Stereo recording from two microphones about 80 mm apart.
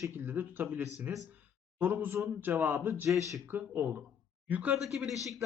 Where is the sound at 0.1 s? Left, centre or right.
Right.